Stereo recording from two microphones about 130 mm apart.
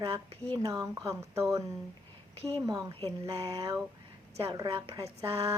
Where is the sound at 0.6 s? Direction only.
25° right (ahead or behind).